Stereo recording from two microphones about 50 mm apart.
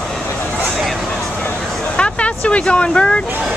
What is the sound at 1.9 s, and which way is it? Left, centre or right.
Speech, left.